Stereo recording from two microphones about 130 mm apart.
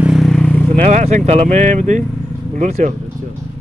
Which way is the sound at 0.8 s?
65° right (ahead or behind).